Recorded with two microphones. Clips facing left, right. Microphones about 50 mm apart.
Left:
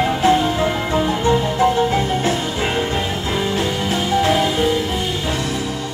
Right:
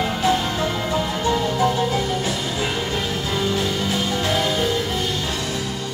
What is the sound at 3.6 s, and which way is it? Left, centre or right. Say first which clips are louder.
Music: left 2 dB; left.